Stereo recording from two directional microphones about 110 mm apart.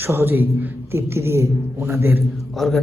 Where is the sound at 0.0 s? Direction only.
20° right (ahead or behind).